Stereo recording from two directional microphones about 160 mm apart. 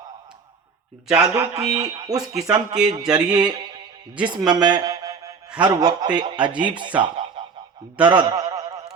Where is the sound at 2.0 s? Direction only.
20° right (ahead or behind).